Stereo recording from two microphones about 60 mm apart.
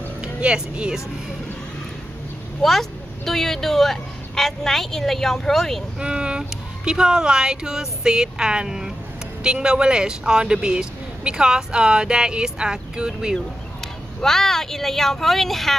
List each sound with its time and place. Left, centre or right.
0.2 s speech: centre
2.6 s speech: centre
5.9 s speech: centre
14.2 s speech: centre